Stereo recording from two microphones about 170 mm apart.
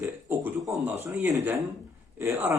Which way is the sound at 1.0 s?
10° right (ahead or behind).